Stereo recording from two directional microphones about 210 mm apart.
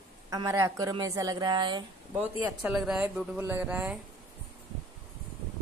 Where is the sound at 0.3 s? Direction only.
15° right (ahead or behind).